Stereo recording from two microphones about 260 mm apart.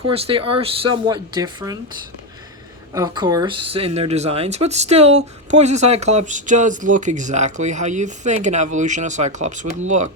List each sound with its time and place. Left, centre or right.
0.1 s speech: right
2.9 s speech: centre